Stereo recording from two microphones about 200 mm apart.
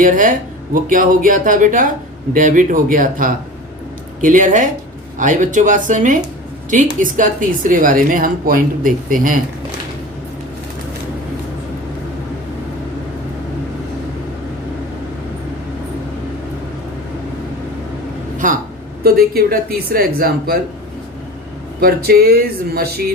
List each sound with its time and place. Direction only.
0.0 s speech: 40° right (ahead or behind)
18.4 s a sound: 40° right (ahead or behind)
19.0 s speech: 50° right (ahead or behind)
21.8 s speech: 50° right (ahead or behind)